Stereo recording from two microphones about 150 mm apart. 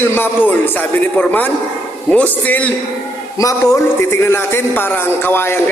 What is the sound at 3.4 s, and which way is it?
A man's voice, 20° left (ahead or behind).